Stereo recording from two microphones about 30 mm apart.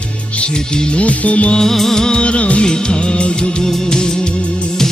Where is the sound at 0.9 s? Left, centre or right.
Left.